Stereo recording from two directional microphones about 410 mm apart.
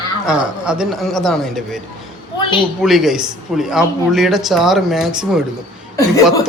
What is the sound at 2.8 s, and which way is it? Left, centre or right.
Speech, centre.